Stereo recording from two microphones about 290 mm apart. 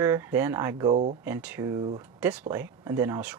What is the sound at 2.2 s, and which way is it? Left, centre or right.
Speech, centre.